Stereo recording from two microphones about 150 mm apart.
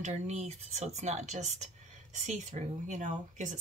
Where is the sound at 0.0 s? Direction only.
45° right (ahead or behind).